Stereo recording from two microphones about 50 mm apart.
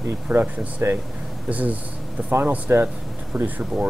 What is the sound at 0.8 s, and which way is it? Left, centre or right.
Speech, right.